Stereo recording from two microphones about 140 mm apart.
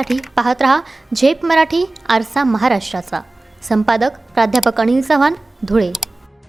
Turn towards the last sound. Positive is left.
turn(degrees=0)  # may be behind; listen again after turning